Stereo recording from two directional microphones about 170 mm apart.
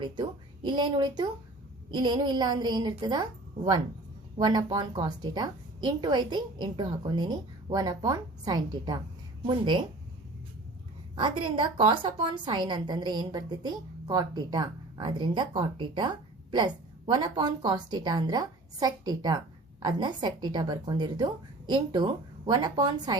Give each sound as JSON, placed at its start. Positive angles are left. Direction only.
{"t": 0.0, "sound": "a woman's voice", "side_deg": -25}
{"t": 11.1, "sound": "a woman's voice", "side_deg": -30}